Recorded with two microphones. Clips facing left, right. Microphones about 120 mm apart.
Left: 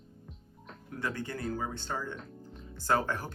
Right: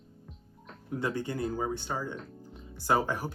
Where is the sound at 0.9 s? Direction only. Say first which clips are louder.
Right 4 dB; 20° right (ahead or behind).